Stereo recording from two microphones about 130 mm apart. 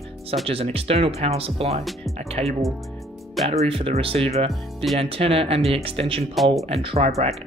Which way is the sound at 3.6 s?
45° right (ahead or behind).